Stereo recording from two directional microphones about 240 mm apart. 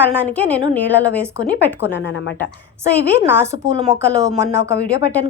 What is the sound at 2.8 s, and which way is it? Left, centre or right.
A woman's voice, centre.